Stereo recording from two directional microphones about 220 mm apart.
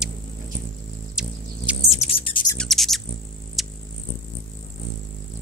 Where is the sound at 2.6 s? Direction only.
Centre (ahead or behind).